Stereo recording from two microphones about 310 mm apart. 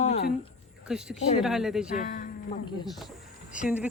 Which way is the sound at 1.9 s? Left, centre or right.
Left.